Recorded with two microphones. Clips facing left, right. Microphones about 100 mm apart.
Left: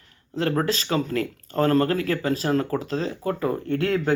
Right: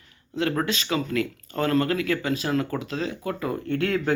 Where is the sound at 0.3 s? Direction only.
35° left (ahead or behind).